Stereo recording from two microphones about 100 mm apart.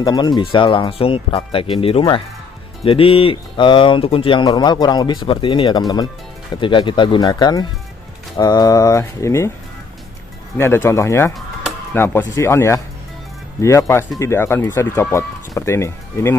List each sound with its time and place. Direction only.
0.0 s speech: 45° left (ahead or behind)
4.5 s speech: 45° left (ahead or behind)
6.5 s speech: 55° left (ahead or behind); by 9.5 s 30° left (ahead or behind)
10.6 s speech: 25° left (ahead or behind)